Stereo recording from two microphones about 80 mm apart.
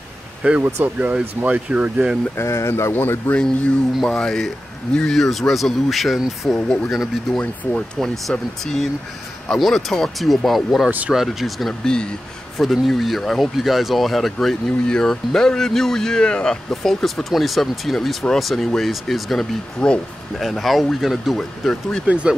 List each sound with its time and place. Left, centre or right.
0.4 s speech: centre
2.3 s speech: left
3.3 s speech: centre
7.3 s speech: centre
10.9 s speech: centre
11.1 s speech: centre
22.0 s speech: centre